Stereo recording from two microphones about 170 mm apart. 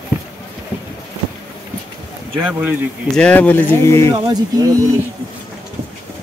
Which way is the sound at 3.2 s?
10° left (ahead or behind).